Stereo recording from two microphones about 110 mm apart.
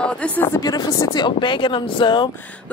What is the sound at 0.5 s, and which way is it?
Speech, 35° left (ahead or behind).